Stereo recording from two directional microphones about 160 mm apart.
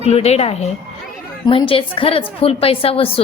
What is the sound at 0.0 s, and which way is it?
A woman's voice, 40° left (ahead or behind).